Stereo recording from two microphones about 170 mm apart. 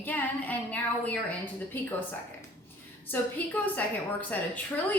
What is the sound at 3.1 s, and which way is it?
Speech, 10° left (ahead or behind).